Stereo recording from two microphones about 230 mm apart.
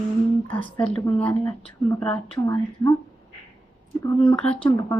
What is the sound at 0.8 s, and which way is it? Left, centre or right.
Speech, centre.